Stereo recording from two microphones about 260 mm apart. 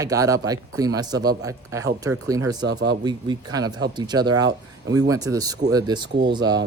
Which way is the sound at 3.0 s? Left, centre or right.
Centre.